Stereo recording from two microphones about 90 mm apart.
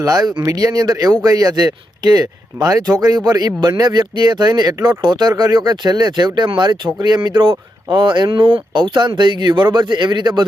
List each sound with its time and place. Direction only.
0.0 s speech: 45° right (ahead or behind)